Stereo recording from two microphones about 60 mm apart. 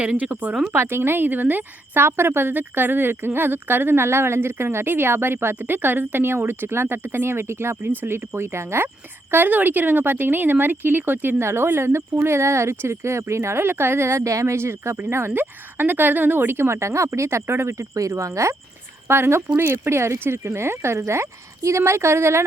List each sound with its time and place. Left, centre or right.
0.0 s speech: centre
0.7 s speech: right
9.3 s speech: right
15.3 s speech: right
19.0 s speech: right